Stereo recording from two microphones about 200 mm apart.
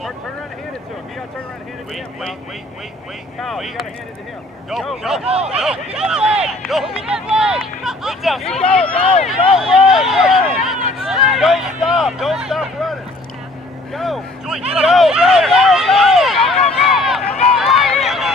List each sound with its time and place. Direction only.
3.3 s speech: centre (ahead or behind)
5.2 s speech: 30° right (ahead or behind)
5.5 s speech: 5° right (ahead or behind)
8.9 s speech: 30° left (ahead or behind)
9.6 s speech: centre (ahead or behind)
11.0 s a sound: 5° right (ahead or behind)
13.9 s speech: centre (ahead or behind)
16.7 s run: centre (ahead or behind)